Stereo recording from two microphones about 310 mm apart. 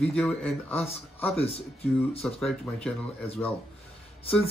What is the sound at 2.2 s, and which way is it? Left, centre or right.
Speech, centre.